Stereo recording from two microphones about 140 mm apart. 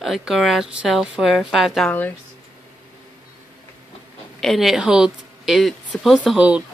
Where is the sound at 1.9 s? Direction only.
15° left (ahead or behind).